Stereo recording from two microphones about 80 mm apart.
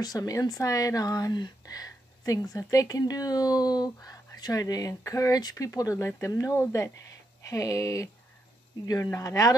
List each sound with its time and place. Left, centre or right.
0.0 s speech: left
1.3 s speech: left